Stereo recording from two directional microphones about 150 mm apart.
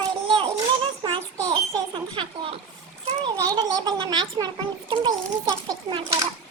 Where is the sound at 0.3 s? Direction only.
35° right (ahead or behind).